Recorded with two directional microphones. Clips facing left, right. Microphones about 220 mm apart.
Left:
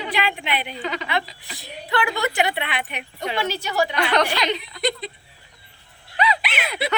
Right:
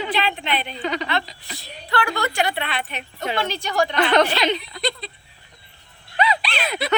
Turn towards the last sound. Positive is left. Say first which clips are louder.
# right 1 dB
turn(degrees=20)  # may be behind; listen again after turning